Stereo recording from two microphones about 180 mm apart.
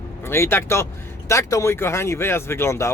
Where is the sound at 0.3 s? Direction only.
15° left (ahead or behind).